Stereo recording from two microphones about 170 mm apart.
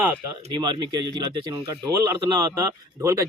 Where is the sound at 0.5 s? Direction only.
25° right (ahead or behind).